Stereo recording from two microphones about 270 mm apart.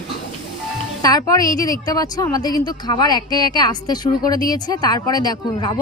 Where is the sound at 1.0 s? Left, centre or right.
Centre.